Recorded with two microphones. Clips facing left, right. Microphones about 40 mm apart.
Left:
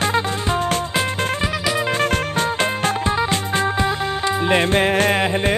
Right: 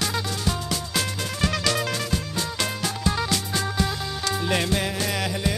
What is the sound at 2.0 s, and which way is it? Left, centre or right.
Music, left.